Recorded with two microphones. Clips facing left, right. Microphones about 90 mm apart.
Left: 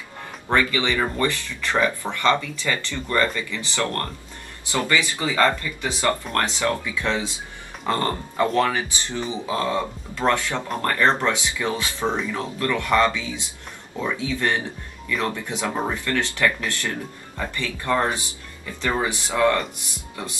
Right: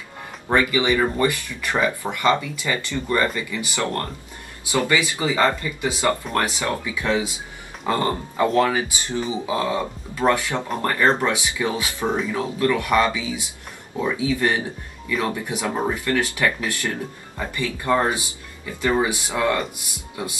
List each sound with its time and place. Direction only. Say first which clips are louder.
0.5 s speech: right 2 dB; 20° right (ahead or behind)